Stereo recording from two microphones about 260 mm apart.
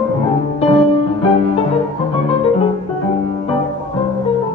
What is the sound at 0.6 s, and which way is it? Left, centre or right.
Music, left.